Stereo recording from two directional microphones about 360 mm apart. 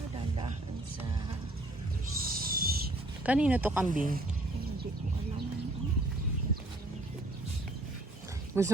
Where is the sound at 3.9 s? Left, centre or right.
Right.